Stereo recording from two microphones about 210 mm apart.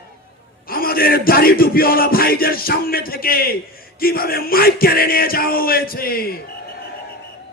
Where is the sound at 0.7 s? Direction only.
45° left (ahead or behind).